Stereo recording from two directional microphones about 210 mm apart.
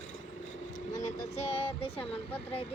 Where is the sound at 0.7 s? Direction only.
35° left (ahead or behind).